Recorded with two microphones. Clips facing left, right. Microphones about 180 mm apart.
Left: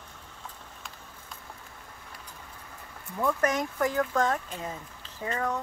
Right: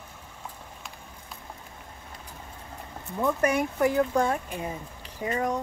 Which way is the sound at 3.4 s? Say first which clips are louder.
Right 5 dB; 10° right (ahead or behind).